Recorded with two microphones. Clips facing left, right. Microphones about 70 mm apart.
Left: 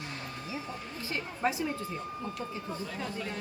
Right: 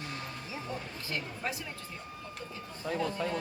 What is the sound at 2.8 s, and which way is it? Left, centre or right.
Speech, right.